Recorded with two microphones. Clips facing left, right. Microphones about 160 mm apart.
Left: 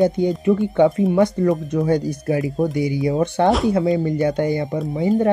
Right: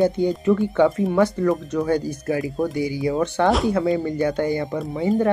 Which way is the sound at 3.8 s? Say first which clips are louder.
Left 2 dB; 25° left (ahead or behind).